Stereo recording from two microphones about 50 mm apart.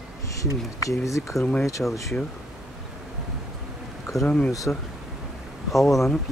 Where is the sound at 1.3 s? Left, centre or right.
Left.